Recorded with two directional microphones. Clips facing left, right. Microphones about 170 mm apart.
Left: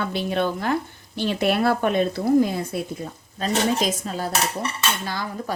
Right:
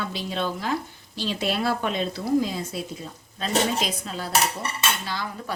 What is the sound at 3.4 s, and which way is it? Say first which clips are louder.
Speech: left 2 dB; 45° left (ahead or behind).